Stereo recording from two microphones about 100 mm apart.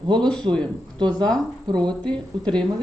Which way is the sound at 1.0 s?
45° right (ahead or behind).